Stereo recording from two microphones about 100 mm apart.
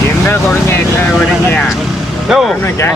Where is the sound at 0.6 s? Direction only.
20° left (ahead or behind).